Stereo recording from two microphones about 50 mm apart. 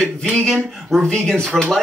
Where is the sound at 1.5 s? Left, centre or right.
Centre.